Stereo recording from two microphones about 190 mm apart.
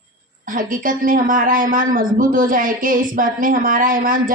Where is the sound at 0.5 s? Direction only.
45° right (ahead or behind).